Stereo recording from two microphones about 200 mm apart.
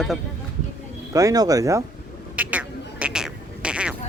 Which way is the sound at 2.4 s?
5° right (ahead or behind).